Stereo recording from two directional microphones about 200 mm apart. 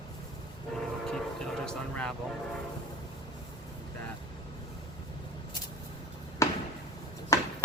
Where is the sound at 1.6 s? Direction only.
5° left (ahead or behind).